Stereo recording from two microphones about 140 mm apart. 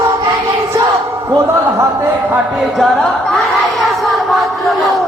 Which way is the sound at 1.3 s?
20° right (ahead or behind).